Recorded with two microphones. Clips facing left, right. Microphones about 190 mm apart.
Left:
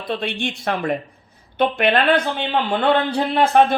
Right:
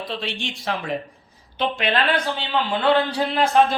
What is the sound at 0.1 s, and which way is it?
Speech, 55° left (ahead or behind).